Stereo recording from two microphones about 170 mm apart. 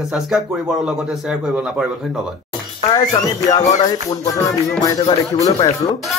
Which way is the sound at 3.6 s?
45° left (ahead or behind).